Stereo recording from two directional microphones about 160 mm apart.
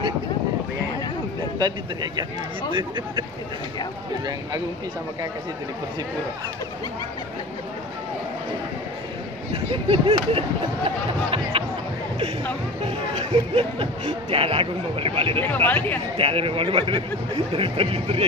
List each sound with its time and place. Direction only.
1.6 s speech: 25° right (ahead or behind)
9.5 s speech: 35° right (ahead or behind)
13.1 s speech: 40° right (ahead or behind)
15.4 s speech: 10° left (ahead or behind)
16.2 s speech: 35° right (ahead or behind)